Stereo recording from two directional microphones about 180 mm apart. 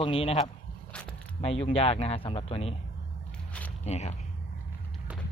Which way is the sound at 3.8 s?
35° left (ahead or behind).